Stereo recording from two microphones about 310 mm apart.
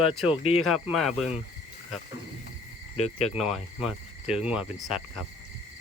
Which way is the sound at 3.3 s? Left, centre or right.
Centre.